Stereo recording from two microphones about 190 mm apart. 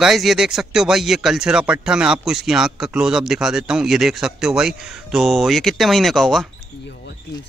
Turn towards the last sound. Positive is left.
turn(degrees=0)  # may be behind; listen again after turning